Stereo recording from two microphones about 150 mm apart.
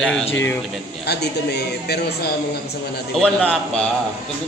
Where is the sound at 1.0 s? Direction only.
90° left.